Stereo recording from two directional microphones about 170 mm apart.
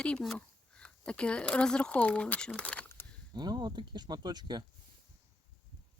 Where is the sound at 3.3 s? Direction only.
25° right (ahead or behind).